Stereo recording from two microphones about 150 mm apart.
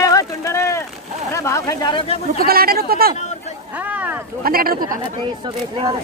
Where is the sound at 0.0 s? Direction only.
20° left (ahead or behind).